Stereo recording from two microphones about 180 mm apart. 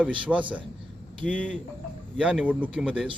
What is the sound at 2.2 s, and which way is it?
Speech, 5° right (ahead or behind).